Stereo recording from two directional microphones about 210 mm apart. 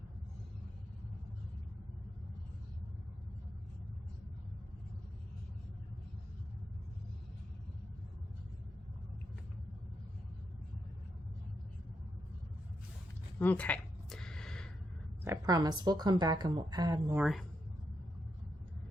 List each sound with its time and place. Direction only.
13.4 s a sound: 5° left (ahead or behind)
15.2 s a woman's voice: 15° right (ahead or behind)
17.2 s speech: centre (ahead or behind)